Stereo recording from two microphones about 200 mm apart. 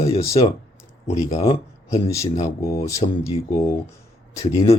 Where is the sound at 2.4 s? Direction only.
15° left (ahead or behind).